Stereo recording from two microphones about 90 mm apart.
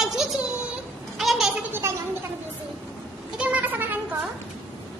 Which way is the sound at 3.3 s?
15° right (ahead or behind).